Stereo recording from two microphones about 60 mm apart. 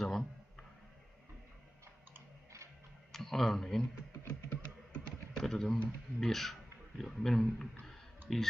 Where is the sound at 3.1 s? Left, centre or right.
Centre.